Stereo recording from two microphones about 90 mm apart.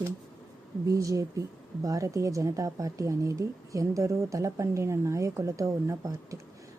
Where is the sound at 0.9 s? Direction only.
35° right (ahead or behind).